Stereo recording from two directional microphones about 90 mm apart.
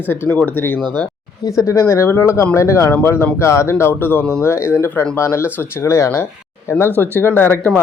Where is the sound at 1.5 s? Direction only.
35° left (ahead or behind).